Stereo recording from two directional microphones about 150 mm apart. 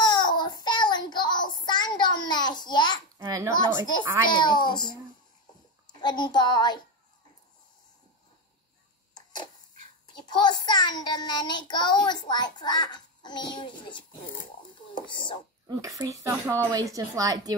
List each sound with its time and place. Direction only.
0.0 s child singing: 30° left (ahead or behind)
3.2 s a sound: 20° right (ahead or behind)
4.3 s a child's voice: 30° left (ahead or behind)
9.1 s a sound: 30° left (ahead or behind)
10.2 s a child's voice: 30° left (ahead or behind)
15.6 s speech: 25° right (ahead or behind)